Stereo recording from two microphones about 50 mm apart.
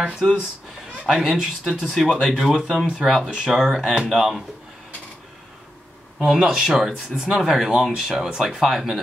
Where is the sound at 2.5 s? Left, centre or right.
Centre.